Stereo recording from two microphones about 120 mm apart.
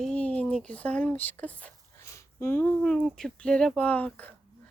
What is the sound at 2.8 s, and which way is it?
A woman's voice, 5° left (ahead or behind).